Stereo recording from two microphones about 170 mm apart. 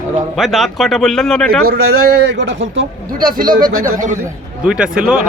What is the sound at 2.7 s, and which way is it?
Speech, 60° right (ahead or behind).